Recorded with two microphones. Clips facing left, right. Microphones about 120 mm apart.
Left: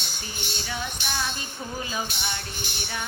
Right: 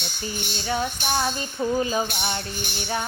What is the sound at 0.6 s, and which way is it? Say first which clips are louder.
Music: right 9 dB; 40° right (ahead or behind).